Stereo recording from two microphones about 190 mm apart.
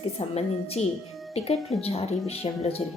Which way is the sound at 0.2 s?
35° left (ahead or behind).